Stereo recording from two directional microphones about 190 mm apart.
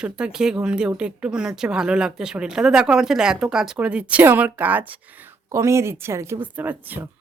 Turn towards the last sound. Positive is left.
turn(degrees=-10)  # may be behind; listen again after turning